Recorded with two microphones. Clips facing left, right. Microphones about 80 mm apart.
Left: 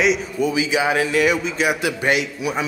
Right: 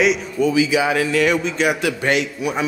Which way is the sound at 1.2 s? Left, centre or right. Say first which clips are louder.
Right 1 dB; centre.